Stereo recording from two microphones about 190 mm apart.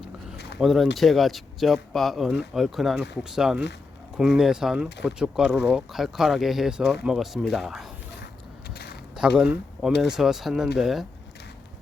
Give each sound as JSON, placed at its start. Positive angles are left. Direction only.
{"t": 0.6, "sound": "speech", "side_deg": 0}
{"t": 8.7, "sound": "a sound", "side_deg": 55}
{"t": 9.1, "sound": "speech", "side_deg": -5}